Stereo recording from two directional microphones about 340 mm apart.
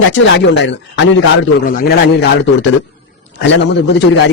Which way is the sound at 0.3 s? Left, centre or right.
Left.